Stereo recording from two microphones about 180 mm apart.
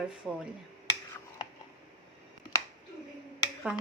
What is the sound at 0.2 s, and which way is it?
Speech, centre (ahead or behind).